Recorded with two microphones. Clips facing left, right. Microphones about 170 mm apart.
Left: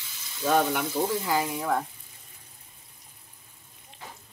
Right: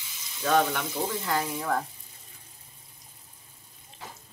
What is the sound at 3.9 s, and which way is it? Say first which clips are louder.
Water: right 1 dB; 35° right (ahead or behind).